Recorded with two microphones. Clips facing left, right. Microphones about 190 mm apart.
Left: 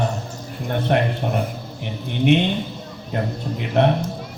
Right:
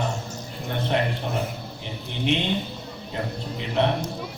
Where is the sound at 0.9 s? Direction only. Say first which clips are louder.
Left 5 dB; 55° left (ahead or behind).